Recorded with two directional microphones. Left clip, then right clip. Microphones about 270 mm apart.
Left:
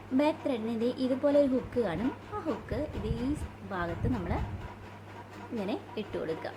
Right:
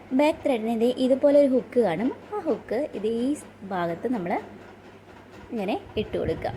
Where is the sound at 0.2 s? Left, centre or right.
Centre.